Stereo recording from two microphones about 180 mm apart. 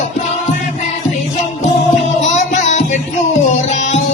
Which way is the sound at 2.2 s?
40° left (ahead or behind).